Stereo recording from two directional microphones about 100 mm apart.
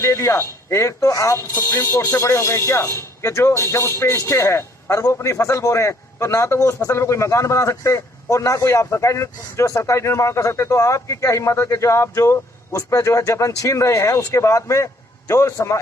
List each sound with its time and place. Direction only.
0.0 s a man's voice: 30° left (ahead or behind)